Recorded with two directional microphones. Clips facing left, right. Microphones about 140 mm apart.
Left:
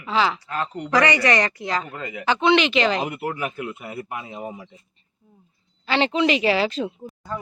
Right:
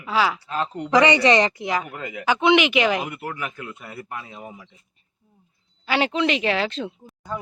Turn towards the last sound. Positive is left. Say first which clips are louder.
# left 1 dB
turn(degrees=0)  # may be behind; listen again after turning